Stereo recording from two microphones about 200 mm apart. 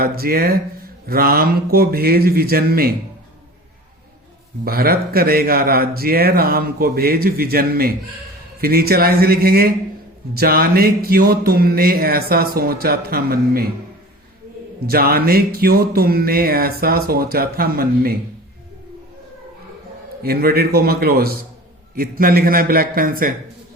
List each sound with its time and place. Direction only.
0.0 s speech: 50° right (ahead or behind)
4.6 s speech: 50° right (ahead or behind)
14.8 s speech: 50° right (ahead or behind)
20.2 s speech: 50° right (ahead or behind)